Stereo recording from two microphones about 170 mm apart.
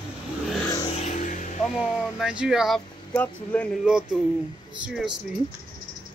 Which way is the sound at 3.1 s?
10° left (ahead or behind).